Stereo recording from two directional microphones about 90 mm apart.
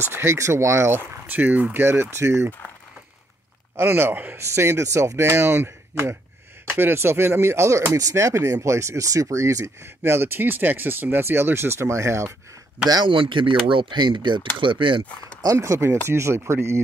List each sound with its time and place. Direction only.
0.1 s speech: 30° right (ahead or behind)
3.7 s speech: 25° right (ahead or behind)
12.8 s a man's voice: 45° right (ahead or behind)
13.1 s speech: 70° right (ahead or behind)
15.4 s speech: 35° right (ahead or behind)